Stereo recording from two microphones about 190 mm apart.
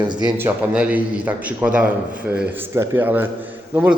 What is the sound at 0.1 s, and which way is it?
Speech, 25° right (ahead or behind).